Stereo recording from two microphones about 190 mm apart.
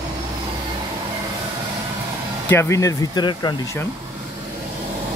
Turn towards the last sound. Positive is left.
turn(degrees=25)  # may be behind; listen again after turning